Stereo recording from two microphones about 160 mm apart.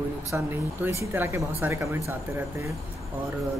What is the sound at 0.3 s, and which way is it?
Speech, 15° right (ahead or behind).